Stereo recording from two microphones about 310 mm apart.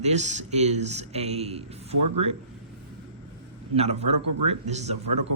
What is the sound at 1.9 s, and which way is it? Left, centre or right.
Speech, right.